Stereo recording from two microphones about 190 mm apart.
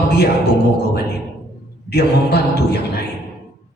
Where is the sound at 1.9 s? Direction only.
60° left (ahead or behind).